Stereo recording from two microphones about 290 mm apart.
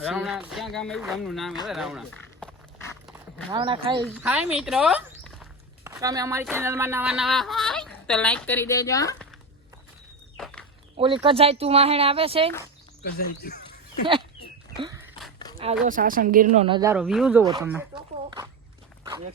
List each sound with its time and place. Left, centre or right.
0.0 s speech: centre
3.1 s a sound: centre
3.5 s speech: centre
4.0 s walk: centre
5.9 s speech: centre
10.3 s walk: centre
10.9 s speech: centre
13.0 s speech: left
14.8 s a sound: centre
15.5 s speech: right
16.6 s speech: centre